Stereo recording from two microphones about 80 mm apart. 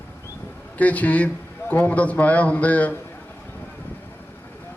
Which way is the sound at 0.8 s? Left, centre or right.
Centre.